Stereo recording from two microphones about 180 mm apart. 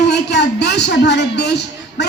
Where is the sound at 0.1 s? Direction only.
70° left (ahead or behind).